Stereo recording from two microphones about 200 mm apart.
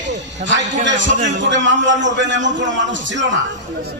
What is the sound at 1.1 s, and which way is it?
Speech, 35° right (ahead or behind).